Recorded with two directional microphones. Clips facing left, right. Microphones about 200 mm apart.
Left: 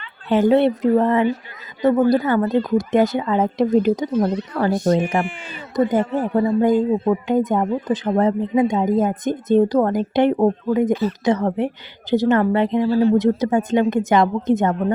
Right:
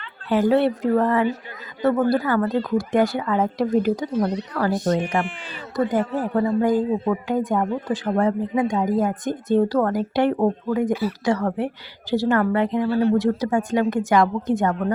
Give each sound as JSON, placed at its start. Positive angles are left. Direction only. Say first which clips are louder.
{"t": 0.3, "sound": "speech", "louder": "left 3 dB", "side_deg": 25}
{"t": 5.7, "sound": "speech", "louder": "left 3 dB", "side_deg": 20}
{"t": 12.9, "sound": "speech", "louder": "left 3 dB", "side_deg": -60}
{"t": 13.1, "sound": "speech", "louder": "left 3 dB", "side_deg": 20}